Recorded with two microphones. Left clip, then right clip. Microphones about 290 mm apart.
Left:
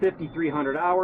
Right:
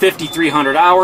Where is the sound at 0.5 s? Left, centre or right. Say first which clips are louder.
Right 14 dB; centre.